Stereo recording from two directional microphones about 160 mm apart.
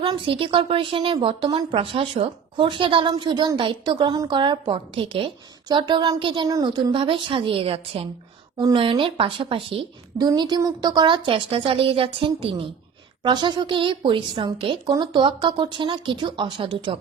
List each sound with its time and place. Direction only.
0.0 s a woman's voice: 35° right (ahead or behind)